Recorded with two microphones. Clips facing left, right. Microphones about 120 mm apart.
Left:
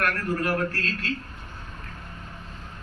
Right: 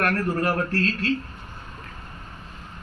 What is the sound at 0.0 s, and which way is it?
Speech, 35° right (ahead or behind).